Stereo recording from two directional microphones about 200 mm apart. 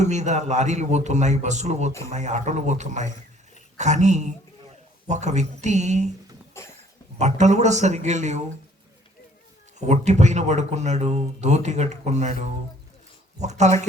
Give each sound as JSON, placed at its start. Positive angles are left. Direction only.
{"t": 0.0, "sound": "speech", "side_deg": -35}
{"t": 6.5, "sound": "cough", "side_deg": 15}
{"t": 7.2, "sound": "speech", "side_deg": -35}
{"t": 9.8, "sound": "speech", "side_deg": -35}